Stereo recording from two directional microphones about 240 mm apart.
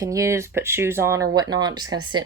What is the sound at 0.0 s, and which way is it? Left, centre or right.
Speech, centre.